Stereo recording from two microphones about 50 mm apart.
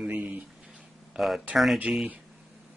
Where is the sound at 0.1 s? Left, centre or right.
Right.